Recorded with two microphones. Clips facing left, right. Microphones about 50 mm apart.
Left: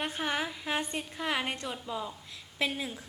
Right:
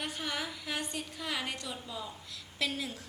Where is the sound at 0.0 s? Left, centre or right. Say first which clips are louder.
Left 5 dB; left.